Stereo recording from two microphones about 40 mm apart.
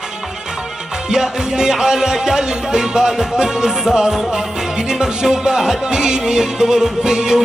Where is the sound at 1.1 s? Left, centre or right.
Centre.